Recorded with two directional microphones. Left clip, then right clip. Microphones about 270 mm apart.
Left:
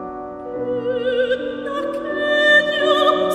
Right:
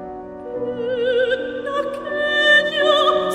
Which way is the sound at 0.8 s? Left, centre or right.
Centre.